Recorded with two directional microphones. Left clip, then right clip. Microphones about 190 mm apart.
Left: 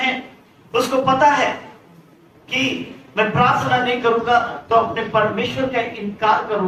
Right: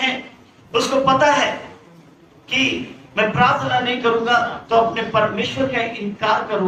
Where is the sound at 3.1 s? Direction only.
20° right (ahead or behind).